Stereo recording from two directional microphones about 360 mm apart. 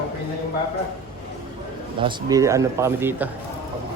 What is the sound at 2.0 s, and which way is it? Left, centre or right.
Speech, centre.